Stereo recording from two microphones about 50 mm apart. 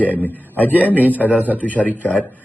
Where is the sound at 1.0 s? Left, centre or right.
Right.